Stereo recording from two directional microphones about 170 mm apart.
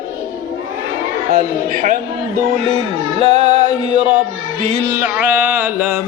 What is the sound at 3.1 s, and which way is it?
Music, 40° right (ahead or behind).